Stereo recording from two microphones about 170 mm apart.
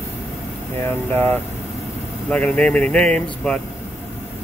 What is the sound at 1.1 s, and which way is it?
Speech, 10° left (ahead or behind).